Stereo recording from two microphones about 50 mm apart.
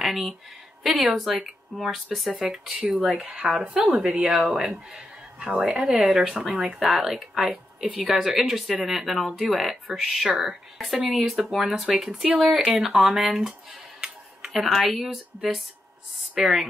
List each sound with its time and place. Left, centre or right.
0.0 s speech: centre
1.4 s speech: centre
3.2 s speech: right